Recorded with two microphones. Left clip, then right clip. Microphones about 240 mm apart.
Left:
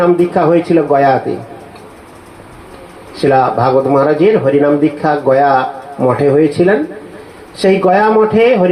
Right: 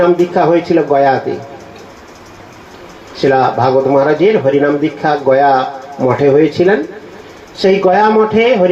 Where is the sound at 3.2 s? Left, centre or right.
Left.